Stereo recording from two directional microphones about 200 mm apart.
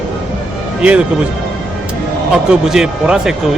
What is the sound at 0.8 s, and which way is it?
Speech, 5° right (ahead or behind).